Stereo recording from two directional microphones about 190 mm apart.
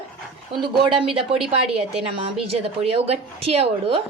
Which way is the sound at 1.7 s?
30° right (ahead or behind).